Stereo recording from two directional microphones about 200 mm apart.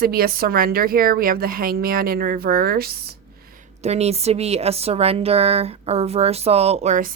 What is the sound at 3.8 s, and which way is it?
A woman's voice, 30° right (ahead or behind).